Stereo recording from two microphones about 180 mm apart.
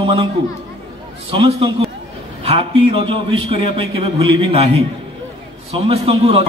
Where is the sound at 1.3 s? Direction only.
30° right (ahead or behind).